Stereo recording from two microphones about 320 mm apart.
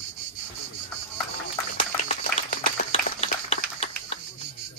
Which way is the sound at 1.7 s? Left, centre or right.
Left.